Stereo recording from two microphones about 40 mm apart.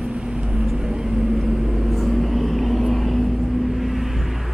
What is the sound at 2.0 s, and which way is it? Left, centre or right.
Vehicle, centre.